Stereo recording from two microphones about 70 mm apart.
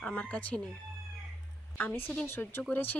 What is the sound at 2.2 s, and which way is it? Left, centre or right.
Speech, left.